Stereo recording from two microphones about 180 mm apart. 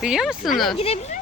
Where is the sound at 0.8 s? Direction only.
35° left (ahead or behind).